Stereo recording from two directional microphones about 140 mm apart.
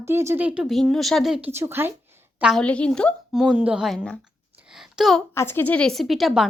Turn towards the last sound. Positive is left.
turn(degrees=0)  # may be behind; listen again after turning